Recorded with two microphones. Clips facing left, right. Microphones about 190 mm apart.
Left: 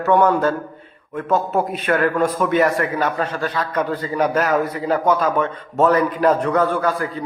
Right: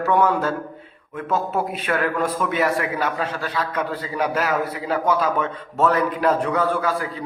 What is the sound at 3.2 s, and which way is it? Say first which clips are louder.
A man's voice: left 3 dB; 50° left (ahead or behind).